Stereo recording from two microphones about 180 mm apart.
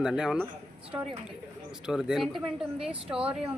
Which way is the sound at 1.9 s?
5° right (ahead or behind).